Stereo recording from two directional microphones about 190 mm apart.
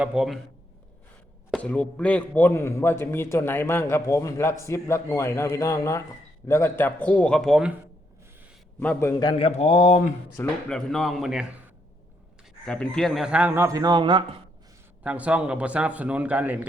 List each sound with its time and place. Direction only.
0.0 s speech: 5° right (ahead or behind)
1.5 s a man's voice: 5° left (ahead or behind)
8.8 s a man's voice: 10° left (ahead or behind)
9.5 s speech: 35° left (ahead or behind)
10.3 s speech: 5° left (ahead or behind)
12.6 s a man's voice: 5° left (ahead or behind); by 14.3 s 25° right (ahead or behind)
15.0 s a man's voice: 5° right (ahead or behind)